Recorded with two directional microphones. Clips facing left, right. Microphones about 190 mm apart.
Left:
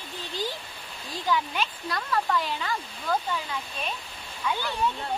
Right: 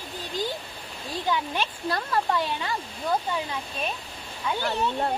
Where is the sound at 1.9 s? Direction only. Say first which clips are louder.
Right 1 dB; 30° right (ahead or behind).